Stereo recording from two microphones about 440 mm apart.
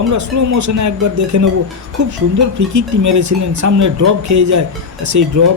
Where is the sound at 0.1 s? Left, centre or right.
Right.